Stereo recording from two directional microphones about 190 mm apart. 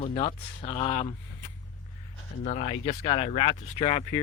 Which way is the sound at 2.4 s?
35° left (ahead or behind).